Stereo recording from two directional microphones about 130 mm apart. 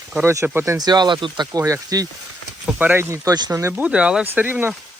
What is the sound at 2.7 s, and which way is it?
Speech, 15° right (ahead or behind).